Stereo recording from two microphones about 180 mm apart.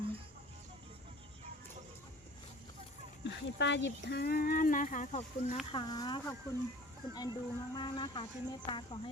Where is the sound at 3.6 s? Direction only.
75° left (ahead or behind); by 5.5 s 45° left (ahead or behind).